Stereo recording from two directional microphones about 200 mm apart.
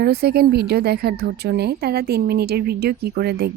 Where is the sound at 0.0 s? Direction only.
55° right (ahead or behind).